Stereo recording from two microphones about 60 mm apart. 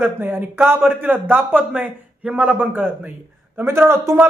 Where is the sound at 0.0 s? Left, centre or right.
Right.